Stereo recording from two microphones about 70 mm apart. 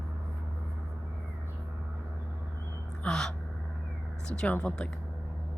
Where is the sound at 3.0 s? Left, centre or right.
Centre.